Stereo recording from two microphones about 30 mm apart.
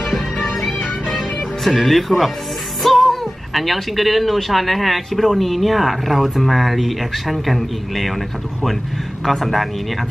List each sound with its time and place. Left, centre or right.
0.7 s music: left
1.8 s speech: centre
9.2 s speech: centre